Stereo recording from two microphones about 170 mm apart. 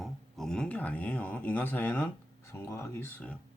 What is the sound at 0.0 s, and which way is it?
Speech, 5° left (ahead or behind).